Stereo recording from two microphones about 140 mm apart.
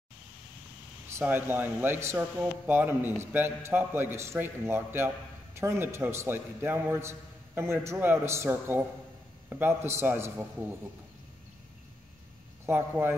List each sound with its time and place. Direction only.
1.1 s a man's voice: 15° right (ahead or behind)
12.6 s a man's voice: 15° right (ahead or behind)